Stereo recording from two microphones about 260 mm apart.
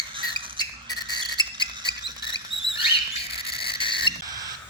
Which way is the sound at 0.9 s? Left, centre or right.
Centre.